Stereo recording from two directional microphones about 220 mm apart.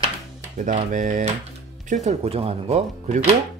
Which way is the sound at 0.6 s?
35° right (ahead or behind).